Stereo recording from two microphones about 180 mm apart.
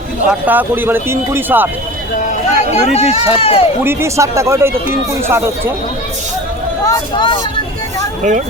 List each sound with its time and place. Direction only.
0.3 s speech: 10° right (ahead or behind)
2.1 s speech: 40° left (ahead or behind)
3.8 s speech: 15° right (ahead or behind)
6.8 s speech: 25° left (ahead or behind)
8.2 s speech: 45° right (ahead or behind)